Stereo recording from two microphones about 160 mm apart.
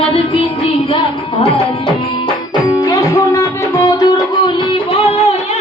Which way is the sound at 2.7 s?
25° left (ahead or behind).